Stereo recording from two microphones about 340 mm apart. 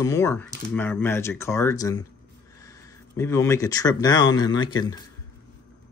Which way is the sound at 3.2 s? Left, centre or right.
Centre.